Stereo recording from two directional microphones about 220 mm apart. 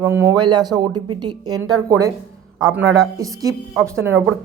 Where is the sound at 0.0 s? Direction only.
10° right (ahead or behind).